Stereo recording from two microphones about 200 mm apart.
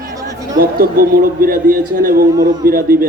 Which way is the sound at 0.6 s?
45° right (ahead or behind).